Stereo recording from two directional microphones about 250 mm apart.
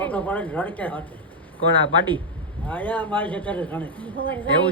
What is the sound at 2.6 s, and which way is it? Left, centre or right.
Speech, centre.